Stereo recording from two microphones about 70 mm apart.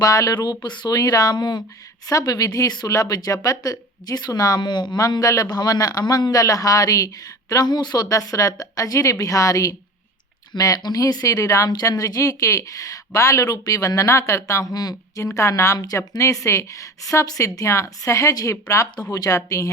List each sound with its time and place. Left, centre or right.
0.0 s a woman's voice: left
0.3 s speech: left
2.0 s a woman's voice: left
2.8 s a woman's voice: left
7.5 s speech: left
8.1 s a woman's voice: left
10.5 s a woman's voice: left
11.7 s a woman's voice: left
15.4 s a woman's voice: left